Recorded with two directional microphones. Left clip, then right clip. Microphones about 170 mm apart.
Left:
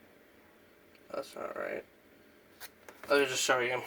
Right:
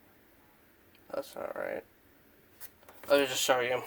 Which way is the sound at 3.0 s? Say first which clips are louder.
Right 2 dB; 20° right (ahead or behind).